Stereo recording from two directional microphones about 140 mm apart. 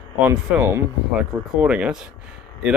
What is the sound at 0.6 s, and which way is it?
Speech, 15° right (ahead or behind).